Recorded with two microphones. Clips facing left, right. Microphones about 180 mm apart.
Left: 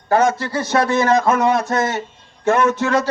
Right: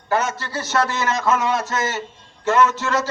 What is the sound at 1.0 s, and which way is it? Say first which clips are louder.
Speech: left 5 dB; 60° left (ahead or behind).